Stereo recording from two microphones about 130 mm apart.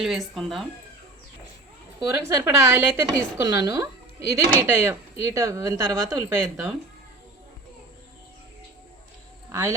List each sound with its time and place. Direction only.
0.0 s speech: centre (ahead or behind)
2.0 s speech: 30° right (ahead or behind)
9.5 s speech: 20° right (ahead or behind)